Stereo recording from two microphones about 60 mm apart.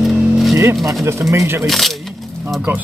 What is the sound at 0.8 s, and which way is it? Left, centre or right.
Speech, right.